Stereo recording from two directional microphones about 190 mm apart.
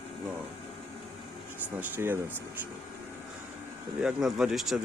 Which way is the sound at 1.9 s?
10° right (ahead or behind).